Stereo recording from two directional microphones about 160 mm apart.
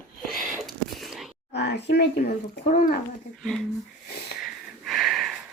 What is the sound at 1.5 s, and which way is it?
Speech, 90° left.